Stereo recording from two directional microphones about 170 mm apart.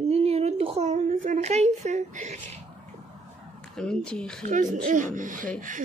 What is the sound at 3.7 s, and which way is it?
Speech, 5° left (ahead or behind).